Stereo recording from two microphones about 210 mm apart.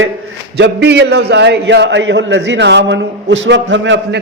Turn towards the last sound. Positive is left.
turn(degrees=-55)  # may be behind; listen again after turning